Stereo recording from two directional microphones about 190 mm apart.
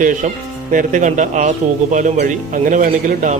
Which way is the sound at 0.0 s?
45° right (ahead or behind).